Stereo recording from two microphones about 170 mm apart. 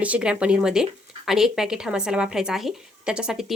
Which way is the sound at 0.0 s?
5° right (ahead or behind).